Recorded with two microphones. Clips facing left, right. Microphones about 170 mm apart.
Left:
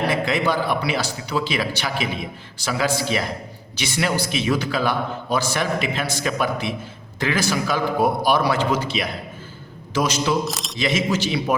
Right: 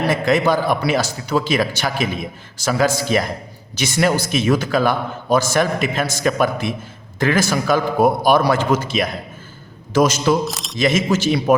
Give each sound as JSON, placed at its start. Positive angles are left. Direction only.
{"t": 0.1, "sound": "a man's voice", "side_deg": -45}
{"t": 10.4, "sound": "speech", "side_deg": 0}
{"t": 10.8, "sound": "a man's voice", "side_deg": -45}